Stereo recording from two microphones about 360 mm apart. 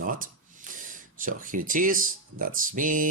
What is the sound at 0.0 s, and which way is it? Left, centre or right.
Speech, right.